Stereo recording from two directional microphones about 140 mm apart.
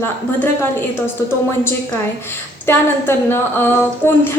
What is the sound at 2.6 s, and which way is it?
A woman's voice, 15° left (ahead or behind).